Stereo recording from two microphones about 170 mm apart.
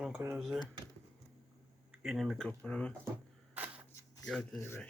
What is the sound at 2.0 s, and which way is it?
Speech, 5° right (ahead or behind).